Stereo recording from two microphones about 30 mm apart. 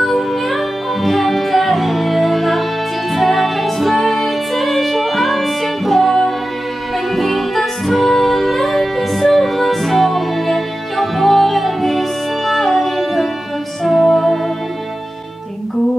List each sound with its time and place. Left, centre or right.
0.0 s music: centre